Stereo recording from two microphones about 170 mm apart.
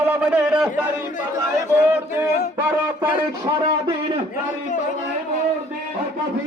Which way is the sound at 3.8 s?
30° right (ahead or behind).